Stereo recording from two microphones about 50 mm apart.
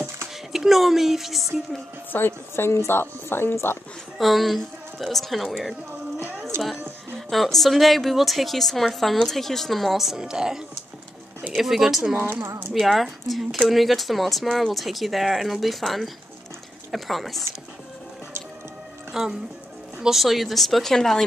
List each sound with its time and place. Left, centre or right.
0.5 s speech: centre
2.1 s speech: left
4.2 s a woman's voice: centre
6.5 s music: right
7.2 s a woman's voice: centre
10.1 s a woman's voice: centre
12.2 s speech: right
12.7 s a woman's voice: centre
19.1 s a woman's voice: centre